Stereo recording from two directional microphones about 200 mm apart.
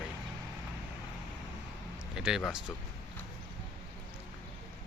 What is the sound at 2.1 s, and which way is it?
Speech, 5° right (ahead or behind).